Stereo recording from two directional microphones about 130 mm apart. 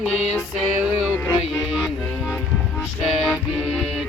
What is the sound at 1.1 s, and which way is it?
Music, 15° left (ahead or behind).